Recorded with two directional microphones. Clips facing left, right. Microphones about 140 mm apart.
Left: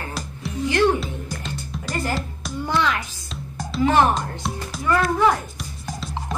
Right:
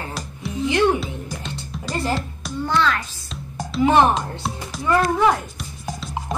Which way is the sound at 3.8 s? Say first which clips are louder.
Right 2 dB; 20° right (ahead or behind).